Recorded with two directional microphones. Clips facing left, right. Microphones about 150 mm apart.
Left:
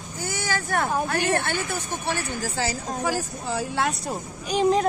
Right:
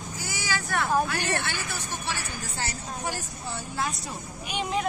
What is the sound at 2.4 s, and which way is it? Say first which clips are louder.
Speech: left 7 dB; 90° left.